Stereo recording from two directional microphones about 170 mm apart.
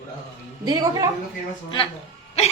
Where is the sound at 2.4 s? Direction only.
40° left (ahead or behind).